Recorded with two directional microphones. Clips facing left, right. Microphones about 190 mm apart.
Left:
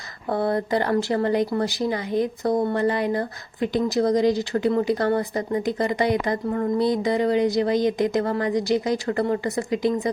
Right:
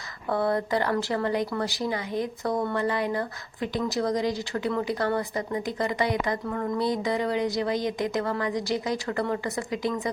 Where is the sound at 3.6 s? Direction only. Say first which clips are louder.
Left 6 dB; 20° left (ahead or behind).